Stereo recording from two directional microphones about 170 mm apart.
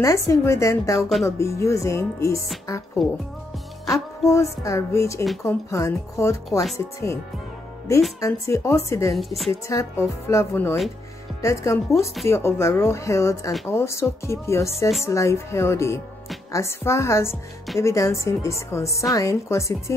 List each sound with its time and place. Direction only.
0.0 s music: 20° left (ahead or behind)
3.0 s a woman's voice: centre (ahead or behind)
3.9 s music: 15° left (ahead or behind)
8.2 s music: 15° left (ahead or behind)
9.1 s a woman's voice: centre (ahead or behind)
9.7 s music: 15° left (ahead or behind)
19.1 s a woman's voice: 20° left (ahead or behind)